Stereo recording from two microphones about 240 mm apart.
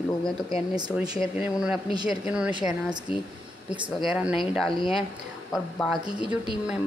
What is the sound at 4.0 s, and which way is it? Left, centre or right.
A woman's voice, centre.